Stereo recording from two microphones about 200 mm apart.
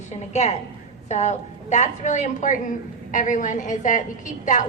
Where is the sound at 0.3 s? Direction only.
35° left (ahead or behind).